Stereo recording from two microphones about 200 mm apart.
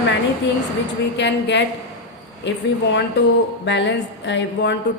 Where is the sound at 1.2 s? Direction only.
60° left (ahead or behind).